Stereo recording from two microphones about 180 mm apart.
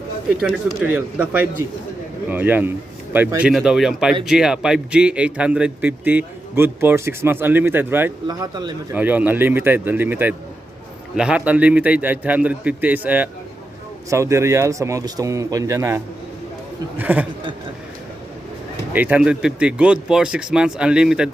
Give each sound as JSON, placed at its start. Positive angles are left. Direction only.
{"t": 0.9, "sound": "a man's voice", "side_deg": -10}
{"t": 8.3, "sound": "speech", "side_deg": -25}
{"t": 8.9, "sound": "a man's voice", "side_deg": -10}
{"t": 17.0, "sound": "a man's voice", "side_deg": -10}
{"t": 18.9, "sound": "speech", "side_deg": -10}